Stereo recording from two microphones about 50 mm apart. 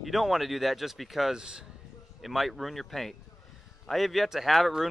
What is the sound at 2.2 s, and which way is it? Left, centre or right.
Speech, centre.